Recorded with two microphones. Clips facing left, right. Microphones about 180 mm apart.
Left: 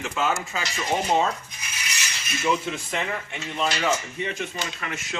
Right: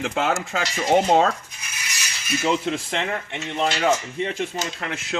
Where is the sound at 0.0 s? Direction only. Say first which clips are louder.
Right 3 dB; 90° right.